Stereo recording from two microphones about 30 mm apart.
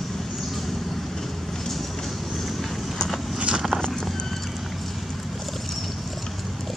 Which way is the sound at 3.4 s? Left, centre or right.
Right.